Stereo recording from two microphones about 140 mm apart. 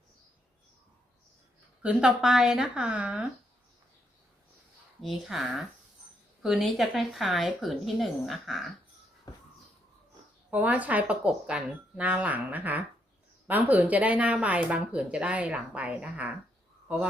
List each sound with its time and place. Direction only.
1.8 s a woman's voice: 10° right (ahead or behind)
4.9 s a woman's voice: centre (ahead or behind)
9.3 s a sound: 30° left (ahead or behind)
10.5 s speech: 10° right (ahead or behind)